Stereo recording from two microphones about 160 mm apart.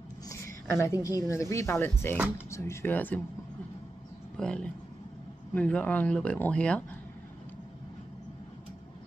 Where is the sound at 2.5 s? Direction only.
15° left (ahead or behind).